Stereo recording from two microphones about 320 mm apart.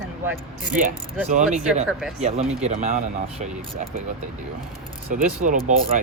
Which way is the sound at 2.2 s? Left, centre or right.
Centre.